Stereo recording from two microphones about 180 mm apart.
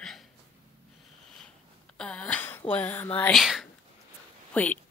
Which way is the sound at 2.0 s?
5° left (ahead or behind).